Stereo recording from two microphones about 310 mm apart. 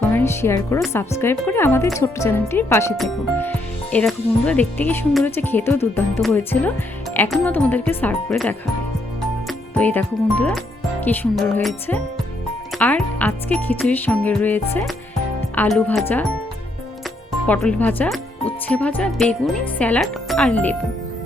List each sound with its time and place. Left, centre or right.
0.1 s speech: centre
17.4 s speech: centre